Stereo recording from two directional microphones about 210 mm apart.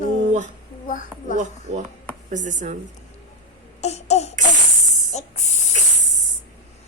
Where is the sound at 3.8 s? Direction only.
30° left (ahead or behind).